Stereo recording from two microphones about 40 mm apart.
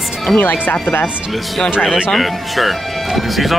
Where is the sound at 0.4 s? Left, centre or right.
Left.